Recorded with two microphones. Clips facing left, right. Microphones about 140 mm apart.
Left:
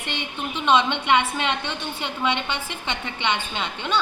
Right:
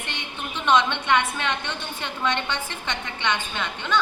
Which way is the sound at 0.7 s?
15° left (ahead or behind).